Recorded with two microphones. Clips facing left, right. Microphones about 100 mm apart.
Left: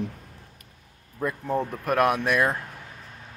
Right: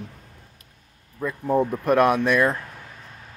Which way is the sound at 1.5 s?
15° right (ahead or behind).